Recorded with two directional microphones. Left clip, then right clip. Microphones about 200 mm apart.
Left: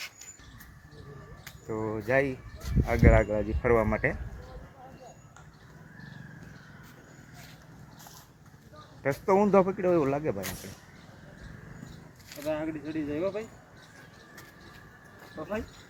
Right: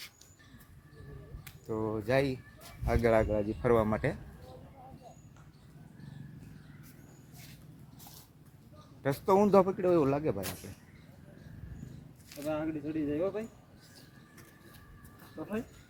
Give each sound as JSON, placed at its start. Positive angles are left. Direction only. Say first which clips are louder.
{"t": 1.5, "sound": "speech", "louder": "left 2 dB", "side_deg": -5}
{"t": 9.0, "sound": "speech", "louder": "left 2 dB", "side_deg": -5}
{"t": 12.5, "sound": "speech", "louder": "left 2 dB", "side_deg": -25}